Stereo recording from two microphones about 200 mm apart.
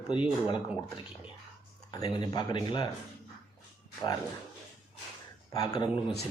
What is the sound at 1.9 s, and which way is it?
Speech, 20° left (ahead or behind).